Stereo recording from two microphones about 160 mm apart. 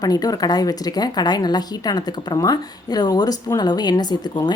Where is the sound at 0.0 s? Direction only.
25° left (ahead or behind).